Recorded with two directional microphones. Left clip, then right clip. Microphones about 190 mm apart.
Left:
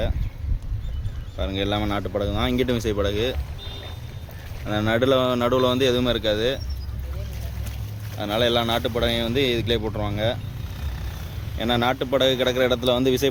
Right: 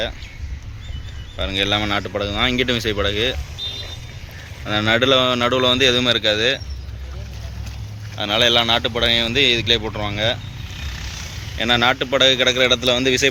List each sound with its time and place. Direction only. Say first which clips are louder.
1.4 s speech: right 6 dB; 5° left (ahead or behind)
4.6 s speech: right 5 dB; 5° left (ahead or behind)
8.2 s speech: right 6 dB; 10° left (ahead or behind)
10.8 s vehicle: right 10 dB; 45° left (ahead or behind)
11.5 s speech: right 6 dB; 10° left (ahead or behind)